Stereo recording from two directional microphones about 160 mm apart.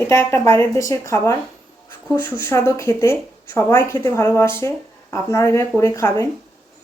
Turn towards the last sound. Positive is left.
turn(degrees=20)  # may be behind; listen again after turning